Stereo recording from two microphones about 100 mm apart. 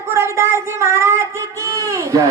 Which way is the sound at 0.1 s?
25° right (ahead or behind).